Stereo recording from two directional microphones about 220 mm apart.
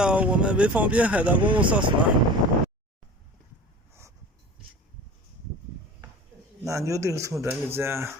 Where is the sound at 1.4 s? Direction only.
20° right (ahead or behind).